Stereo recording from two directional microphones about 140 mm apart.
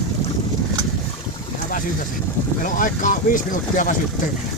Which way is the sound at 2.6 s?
75° left (ahead or behind).